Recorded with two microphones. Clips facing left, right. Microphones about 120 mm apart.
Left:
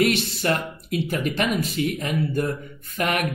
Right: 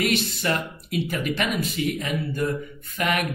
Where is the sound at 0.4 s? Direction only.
45° left (ahead or behind).